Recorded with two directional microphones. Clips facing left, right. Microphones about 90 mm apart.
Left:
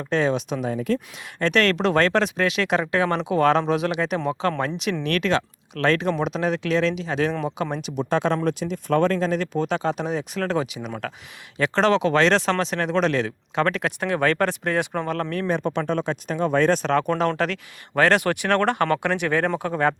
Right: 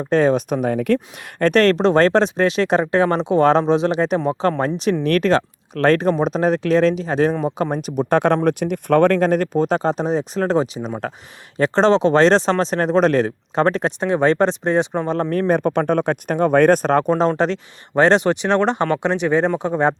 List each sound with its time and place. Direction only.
0.1 s speech: 40° right (ahead or behind); by 0.9 s 60° right (ahead or behind)
1.4 s speech: 40° right (ahead or behind)
15.3 s speech: 45° right (ahead or behind)
17.2 s speech: 30° right (ahead or behind)